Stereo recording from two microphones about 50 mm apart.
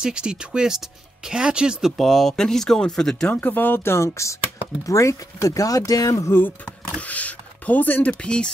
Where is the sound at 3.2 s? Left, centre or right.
Left.